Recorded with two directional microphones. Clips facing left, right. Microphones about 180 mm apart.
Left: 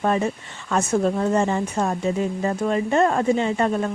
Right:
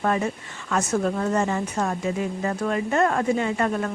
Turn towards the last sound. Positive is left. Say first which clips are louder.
# left 2 dB
turn(degrees=25)  # may be behind; listen again after turning